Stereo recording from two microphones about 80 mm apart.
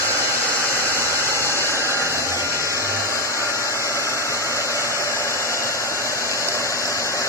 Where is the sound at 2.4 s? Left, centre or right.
Left.